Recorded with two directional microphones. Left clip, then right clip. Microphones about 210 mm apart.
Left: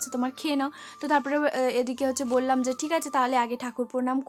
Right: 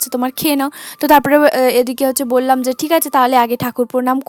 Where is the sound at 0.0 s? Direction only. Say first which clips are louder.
Right 12 dB; 45° right (ahead or behind).